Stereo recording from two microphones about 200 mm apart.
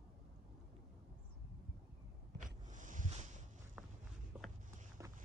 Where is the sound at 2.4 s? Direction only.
40° right (ahead or behind).